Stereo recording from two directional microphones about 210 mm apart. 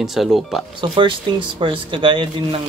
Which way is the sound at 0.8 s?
25° right (ahead or behind).